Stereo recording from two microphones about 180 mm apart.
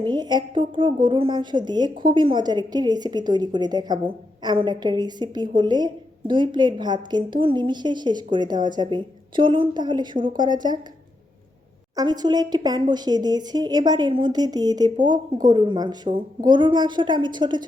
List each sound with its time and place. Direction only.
0.0 s a woman's voice: 25° right (ahead or behind)
11.9 s a woman's voice: 20° right (ahead or behind)